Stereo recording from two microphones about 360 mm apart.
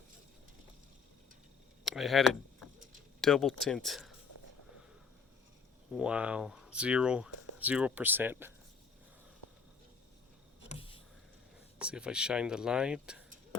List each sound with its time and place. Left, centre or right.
1.8 s vehicle: centre
3.2 s speech: centre
5.9 s speech: centre
10.7 s a sound: centre
11.8 s speech: centre